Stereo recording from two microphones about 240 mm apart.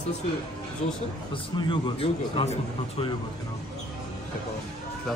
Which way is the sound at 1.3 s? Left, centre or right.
Centre.